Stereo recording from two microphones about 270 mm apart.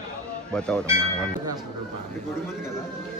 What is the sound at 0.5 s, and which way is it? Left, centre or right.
Speech, centre.